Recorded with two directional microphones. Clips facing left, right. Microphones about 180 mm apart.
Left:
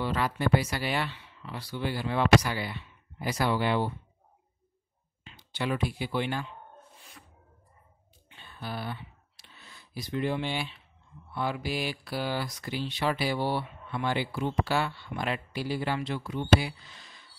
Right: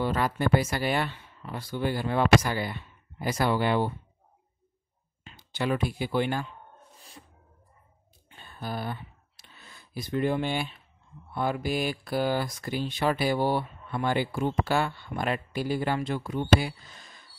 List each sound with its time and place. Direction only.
0.0 s speech: 45° right (ahead or behind)
5.2 s speech: 45° right (ahead or behind)
7.0 s music: 30° right (ahead or behind)
8.3 s a sound: 45° right (ahead or behind)
11.3 s speech: 45° right (ahead or behind)